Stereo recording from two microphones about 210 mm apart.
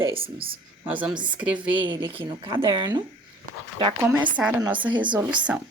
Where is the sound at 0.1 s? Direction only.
25° right (ahead or behind).